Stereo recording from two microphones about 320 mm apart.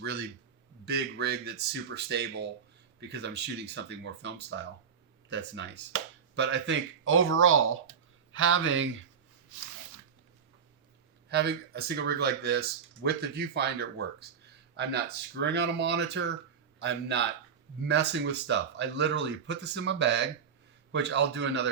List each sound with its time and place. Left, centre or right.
0.0 s speech: right
11.3 s speech: right